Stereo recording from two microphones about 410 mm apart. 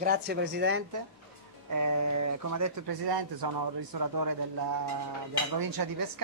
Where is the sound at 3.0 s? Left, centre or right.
Right.